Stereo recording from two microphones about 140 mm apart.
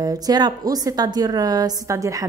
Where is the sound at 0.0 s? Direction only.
30° right (ahead or behind).